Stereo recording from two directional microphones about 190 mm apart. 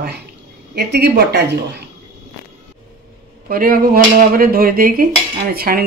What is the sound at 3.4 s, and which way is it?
Speech, 50° right (ahead or behind).